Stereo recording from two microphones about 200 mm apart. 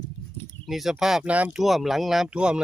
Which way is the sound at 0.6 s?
Centre (ahead or behind).